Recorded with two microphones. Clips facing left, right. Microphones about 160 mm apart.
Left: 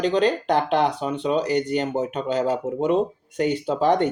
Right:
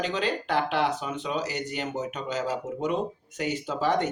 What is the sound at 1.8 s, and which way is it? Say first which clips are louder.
Speech: left 7 dB; 35° left (ahead or behind).